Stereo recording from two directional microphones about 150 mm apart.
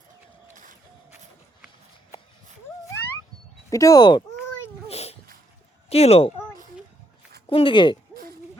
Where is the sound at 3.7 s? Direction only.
25° left (ahead or behind).